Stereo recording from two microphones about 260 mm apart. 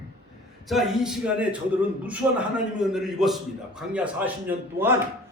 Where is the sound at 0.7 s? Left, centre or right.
Centre.